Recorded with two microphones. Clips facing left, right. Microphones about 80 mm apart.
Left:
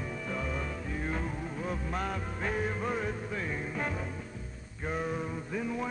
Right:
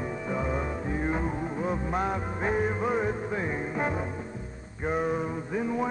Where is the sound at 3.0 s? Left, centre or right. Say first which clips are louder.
Right 6 dB; right.